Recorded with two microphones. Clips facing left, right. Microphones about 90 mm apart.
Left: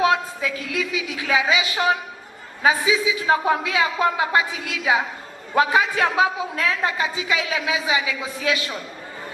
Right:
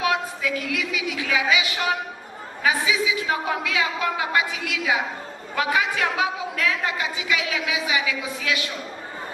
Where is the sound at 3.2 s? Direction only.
25° left (ahead or behind).